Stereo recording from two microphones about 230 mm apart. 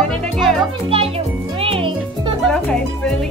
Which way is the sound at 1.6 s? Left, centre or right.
Right.